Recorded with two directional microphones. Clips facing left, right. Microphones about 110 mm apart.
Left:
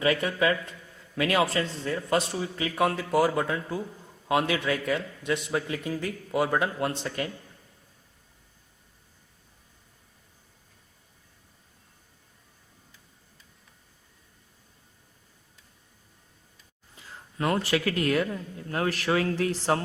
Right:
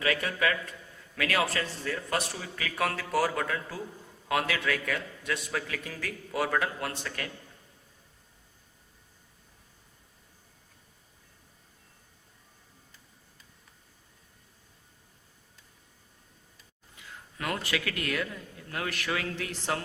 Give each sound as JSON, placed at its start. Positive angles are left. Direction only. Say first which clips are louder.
{"t": 0.0, "sound": "a man's voice", "louder": "left 4 dB", "side_deg": 25}
{"t": 17.0, "sound": "a sound", "louder": "left 1 dB", "side_deg": 35}
{"t": 17.3, "sound": "a man's voice", "louder": "left 7 dB", "side_deg": 30}